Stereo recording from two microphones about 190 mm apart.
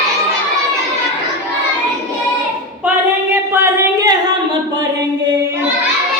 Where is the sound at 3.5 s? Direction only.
15° right (ahead or behind).